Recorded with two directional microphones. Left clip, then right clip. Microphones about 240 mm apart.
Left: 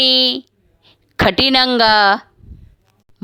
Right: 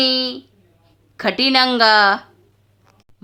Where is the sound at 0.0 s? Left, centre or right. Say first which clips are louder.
Left 5 dB; left.